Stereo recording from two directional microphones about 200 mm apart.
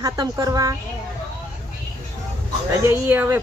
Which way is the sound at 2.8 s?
10° right (ahead or behind).